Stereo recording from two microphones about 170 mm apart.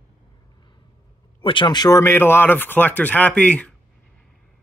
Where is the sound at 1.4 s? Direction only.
30° left (ahead or behind); by 3.7 s 10° left (ahead or behind).